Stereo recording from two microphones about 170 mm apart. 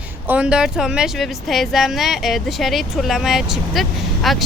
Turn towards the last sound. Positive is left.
turn(degrees=0)  # may be behind; listen again after turning